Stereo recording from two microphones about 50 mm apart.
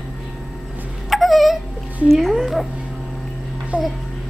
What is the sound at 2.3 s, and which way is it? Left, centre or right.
Speech, centre.